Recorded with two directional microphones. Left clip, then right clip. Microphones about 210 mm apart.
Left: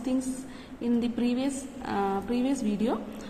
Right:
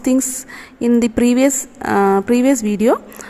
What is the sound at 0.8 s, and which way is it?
Speech, 55° right (ahead or behind).